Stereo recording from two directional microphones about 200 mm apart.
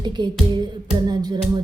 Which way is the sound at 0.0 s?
20° right (ahead or behind).